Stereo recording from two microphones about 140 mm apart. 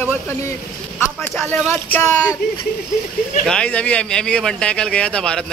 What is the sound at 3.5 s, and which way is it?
Speech, 10° left (ahead or behind).